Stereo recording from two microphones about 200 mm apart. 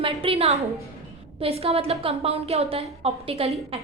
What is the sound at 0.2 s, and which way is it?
A woman's voice, 30° right (ahead or behind).